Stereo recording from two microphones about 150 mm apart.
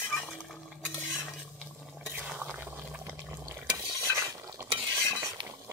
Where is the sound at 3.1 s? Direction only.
15° right (ahead or behind).